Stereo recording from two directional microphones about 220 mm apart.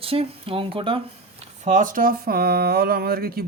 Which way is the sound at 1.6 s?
35° right (ahead or behind).